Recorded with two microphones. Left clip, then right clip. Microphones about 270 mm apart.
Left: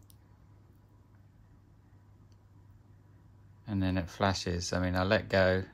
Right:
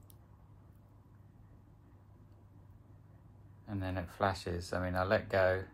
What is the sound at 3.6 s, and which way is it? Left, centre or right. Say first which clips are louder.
Speech: left 6 dB; left.